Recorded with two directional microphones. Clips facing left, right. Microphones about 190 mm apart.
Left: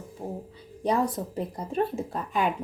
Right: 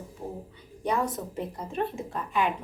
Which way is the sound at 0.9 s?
35° left (ahead or behind).